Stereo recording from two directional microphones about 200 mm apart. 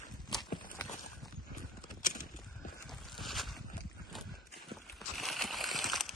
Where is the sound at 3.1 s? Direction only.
Centre (ahead or behind).